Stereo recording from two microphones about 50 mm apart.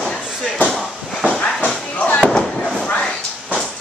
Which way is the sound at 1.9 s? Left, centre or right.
Left.